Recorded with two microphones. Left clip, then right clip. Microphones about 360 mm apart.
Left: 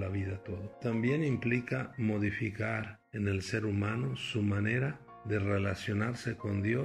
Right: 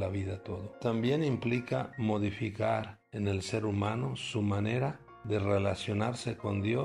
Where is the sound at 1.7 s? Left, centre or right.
Right.